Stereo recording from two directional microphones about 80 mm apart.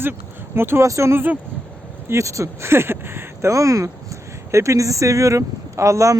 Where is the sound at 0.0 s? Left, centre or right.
Right.